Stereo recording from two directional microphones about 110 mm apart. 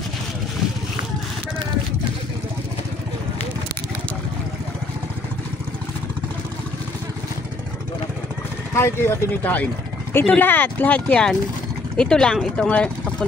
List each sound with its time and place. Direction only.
8.7 s speech: 20° left (ahead or behind)